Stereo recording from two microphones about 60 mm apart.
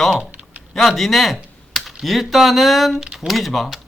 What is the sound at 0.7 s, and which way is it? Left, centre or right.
Speech, centre.